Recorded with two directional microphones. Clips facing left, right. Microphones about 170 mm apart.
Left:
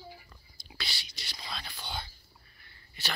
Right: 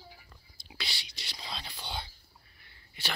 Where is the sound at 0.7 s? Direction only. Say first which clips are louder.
Even; 20° right (ahead or behind).